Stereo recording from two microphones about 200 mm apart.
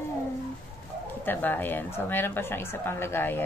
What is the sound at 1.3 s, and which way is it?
A woman's voice, 10° left (ahead or behind).